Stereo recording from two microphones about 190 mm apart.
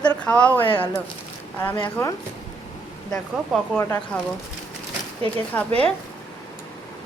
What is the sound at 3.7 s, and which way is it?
Speech, 10° left (ahead or behind).